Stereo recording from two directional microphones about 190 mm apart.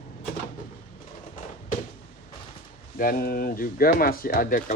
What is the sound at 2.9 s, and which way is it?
Speech, 50° left (ahead or behind).